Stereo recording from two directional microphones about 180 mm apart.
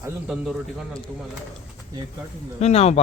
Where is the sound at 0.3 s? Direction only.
5° right (ahead or behind).